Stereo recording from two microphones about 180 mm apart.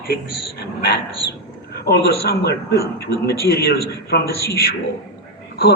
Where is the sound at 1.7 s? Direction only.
60° left (ahead or behind).